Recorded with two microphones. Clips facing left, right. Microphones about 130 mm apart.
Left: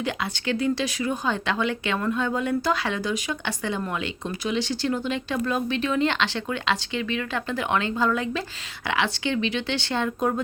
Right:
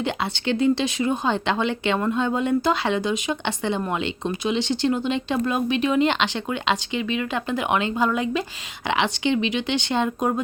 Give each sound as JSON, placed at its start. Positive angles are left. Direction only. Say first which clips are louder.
{"t": 0.0, "sound": "speech", "louder": "right 3 dB", "side_deg": -25}